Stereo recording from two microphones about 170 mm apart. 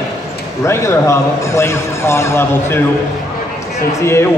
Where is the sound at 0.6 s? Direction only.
15° left (ahead or behind).